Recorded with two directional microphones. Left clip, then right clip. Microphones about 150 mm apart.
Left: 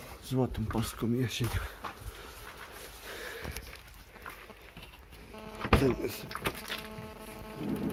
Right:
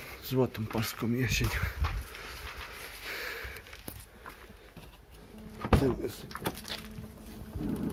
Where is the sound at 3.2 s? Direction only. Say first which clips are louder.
Right 3 dB; centre (ahead or behind).